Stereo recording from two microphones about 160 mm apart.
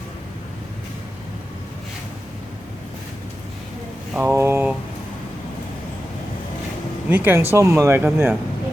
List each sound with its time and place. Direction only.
4.2 s speech: 15° right (ahead or behind)
7.1 s speech: 10° right (ahead or behind)